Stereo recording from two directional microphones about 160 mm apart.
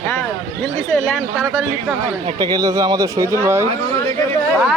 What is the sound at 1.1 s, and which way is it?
Speech, 5° right (ahead or behind).